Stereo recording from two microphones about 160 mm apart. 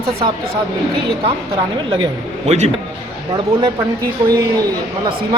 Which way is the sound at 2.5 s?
45° right (ahead or behind).